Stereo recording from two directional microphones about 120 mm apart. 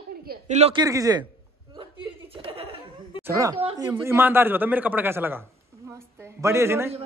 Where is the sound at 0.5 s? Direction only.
65° right (ahead or behind).